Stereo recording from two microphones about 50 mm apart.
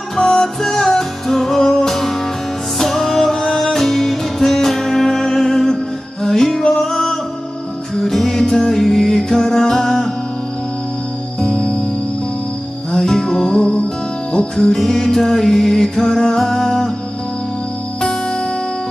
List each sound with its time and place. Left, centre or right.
0.2 s music: centre
11.4 s music: centre
12.9 s music: centre
14.7 s music: centre